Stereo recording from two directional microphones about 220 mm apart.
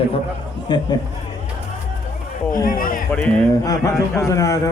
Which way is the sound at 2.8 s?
40° left (ahead or behind).